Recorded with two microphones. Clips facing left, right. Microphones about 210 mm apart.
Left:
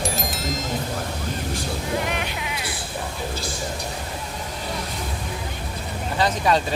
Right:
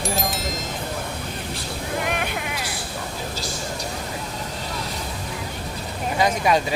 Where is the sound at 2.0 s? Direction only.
55° right (ahead or behind).